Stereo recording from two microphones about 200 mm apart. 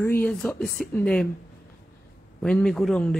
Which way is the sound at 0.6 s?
50° left (ahead or behind).